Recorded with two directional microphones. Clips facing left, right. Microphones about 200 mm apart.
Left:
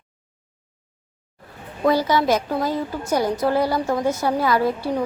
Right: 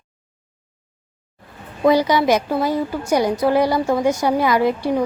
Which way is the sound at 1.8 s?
15° right (ahead or behind).